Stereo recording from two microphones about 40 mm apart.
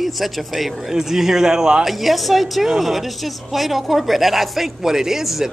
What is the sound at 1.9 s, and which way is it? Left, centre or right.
A man's voice, centre.